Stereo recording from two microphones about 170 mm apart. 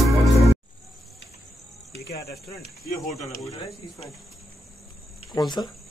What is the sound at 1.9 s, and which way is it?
Cricket, 70° left (ahead or behind).